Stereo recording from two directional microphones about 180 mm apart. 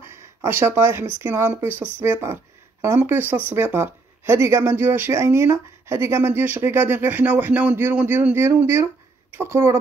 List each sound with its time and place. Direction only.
0.0 s speech: 15° right (ahead or behind)